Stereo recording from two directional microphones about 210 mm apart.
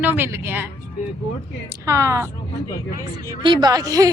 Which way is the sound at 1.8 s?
15° right (ahead or behind).